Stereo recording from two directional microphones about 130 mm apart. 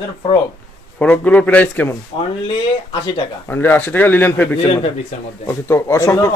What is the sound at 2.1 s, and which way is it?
Speech, 45° left (ahead or behind).